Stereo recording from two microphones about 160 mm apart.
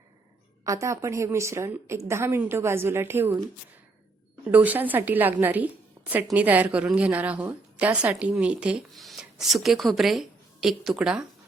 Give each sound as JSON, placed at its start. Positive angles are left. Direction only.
{"t": 0.6, "sound": "a woman's voice", "side_deg": -20}
{"t": 4.5, "sound": "a woman's voice", "side_deg": -10}